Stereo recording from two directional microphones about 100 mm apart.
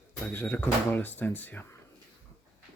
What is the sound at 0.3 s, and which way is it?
Speech, 20° left (ahead or behind).